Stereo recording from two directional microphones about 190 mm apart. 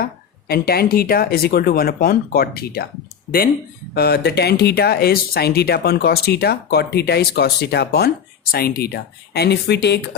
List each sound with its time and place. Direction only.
0.0 s speech: 55° left (ahead or behind)
3.9 s speech: 55° left (ahead or behind)